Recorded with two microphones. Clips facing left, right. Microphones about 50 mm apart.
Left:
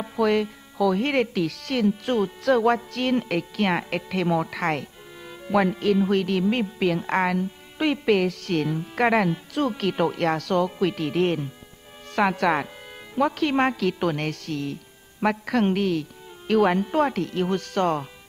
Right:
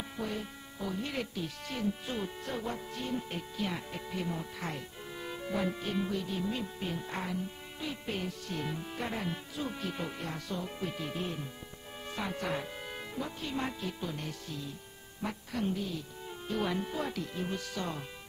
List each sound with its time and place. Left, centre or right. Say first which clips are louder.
0.2 s speech: left 17 dB; left
5.2 s music: even; centre
5.5 s speech: left 13 dB; left